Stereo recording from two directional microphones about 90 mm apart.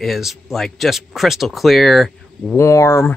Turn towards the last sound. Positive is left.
turn(degrees=30)  # may be behind; listen again after turning